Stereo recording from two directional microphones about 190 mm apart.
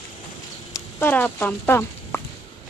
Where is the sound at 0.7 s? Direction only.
15° left (ahead or behind).